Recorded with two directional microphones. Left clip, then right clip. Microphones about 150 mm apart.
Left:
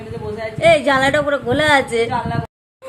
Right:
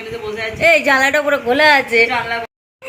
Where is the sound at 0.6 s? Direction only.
Centre (ahead or behind).